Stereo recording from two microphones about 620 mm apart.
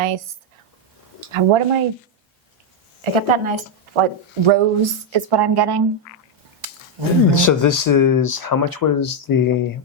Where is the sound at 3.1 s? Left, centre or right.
Right.